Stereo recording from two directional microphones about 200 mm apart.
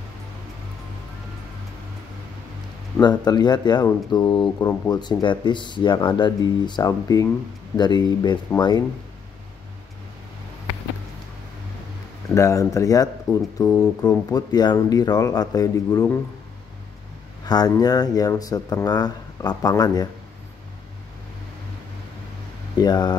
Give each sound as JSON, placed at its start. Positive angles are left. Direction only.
{"t": 3.0, "sound": "speech", "side_deg": 20}
{"t": 12.4, "sound": "speech", "side_deg": 15}
{"t": 17.5, "sound": "speech", "side_deg": 20}
{"t": 22.8, "sound": "speech", "side_deg": 20}